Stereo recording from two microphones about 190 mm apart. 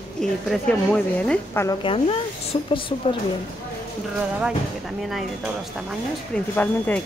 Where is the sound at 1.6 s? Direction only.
25° left (ahead or behind).